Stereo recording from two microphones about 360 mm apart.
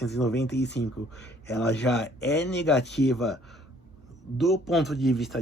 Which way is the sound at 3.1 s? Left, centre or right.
Centre.